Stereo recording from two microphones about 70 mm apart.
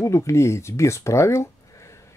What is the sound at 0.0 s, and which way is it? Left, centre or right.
Speech, left.